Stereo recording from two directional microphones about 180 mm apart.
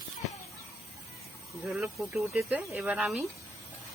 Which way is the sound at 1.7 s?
Centre (ahead or behind).